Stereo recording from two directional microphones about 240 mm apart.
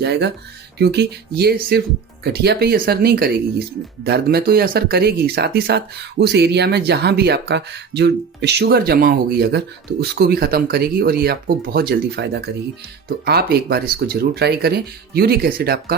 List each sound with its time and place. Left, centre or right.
0.0 s speech: right